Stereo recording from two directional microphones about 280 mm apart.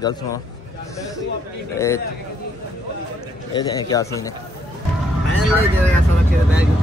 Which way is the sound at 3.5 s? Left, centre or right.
Centre.